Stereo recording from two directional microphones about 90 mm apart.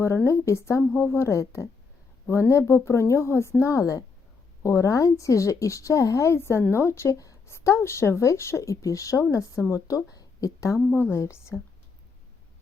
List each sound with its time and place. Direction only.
0.3 s speech: 30° left (ahead or behind)
10.9 s a woman's voice: 25° left (ahead or behind)